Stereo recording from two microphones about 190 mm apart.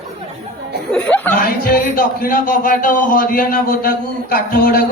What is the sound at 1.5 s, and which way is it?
Speech, 50° left (ahead or behind).